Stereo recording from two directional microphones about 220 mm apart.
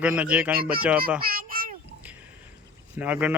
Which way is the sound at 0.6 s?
40° right (ahead or behind).